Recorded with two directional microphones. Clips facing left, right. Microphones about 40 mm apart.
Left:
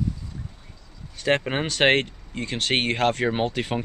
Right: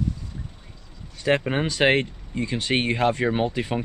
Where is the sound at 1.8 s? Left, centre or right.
Left.